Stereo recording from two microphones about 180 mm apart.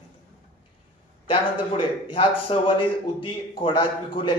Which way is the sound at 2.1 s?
30° left (ahead or behind).